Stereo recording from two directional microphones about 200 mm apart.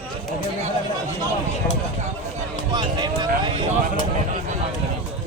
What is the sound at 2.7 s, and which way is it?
Speech, 20° right (ahead or behind).